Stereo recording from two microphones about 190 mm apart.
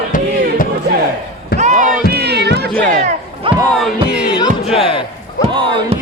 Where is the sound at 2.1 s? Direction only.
60° right (ahead or behind).